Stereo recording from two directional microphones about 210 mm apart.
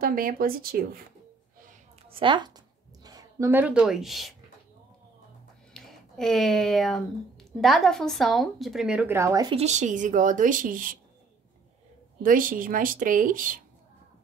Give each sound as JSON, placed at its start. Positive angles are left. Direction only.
{"t": 0.0, "sound": "speech", "side_deg": -45}
{"t": 2.0, "sound": "a sound", "side_deg": -25}
{"t": 5.7, "sound": "speech", "side_deg": 0}
{"t": 9.6, "sound": "a woman's voice", "side_deg": -35}
{"t": 12.2, "sound": "a woman's voice", "side_deg": -40}